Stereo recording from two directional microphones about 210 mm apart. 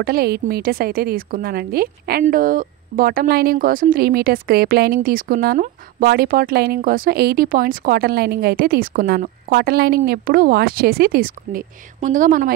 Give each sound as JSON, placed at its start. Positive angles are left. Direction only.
{"t": 0.0, "sound": "a woman's voice", "side_deg": -45}